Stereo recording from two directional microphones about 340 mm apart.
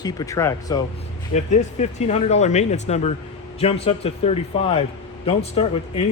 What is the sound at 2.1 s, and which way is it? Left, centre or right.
A man's voice, centre.